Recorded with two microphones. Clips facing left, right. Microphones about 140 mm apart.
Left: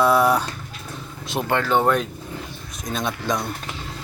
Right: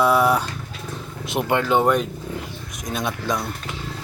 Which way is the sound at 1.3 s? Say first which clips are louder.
Right 1 dB; 15° right (ahead or behind).